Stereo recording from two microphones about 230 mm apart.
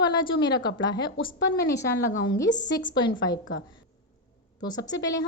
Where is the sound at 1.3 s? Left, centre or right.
Left.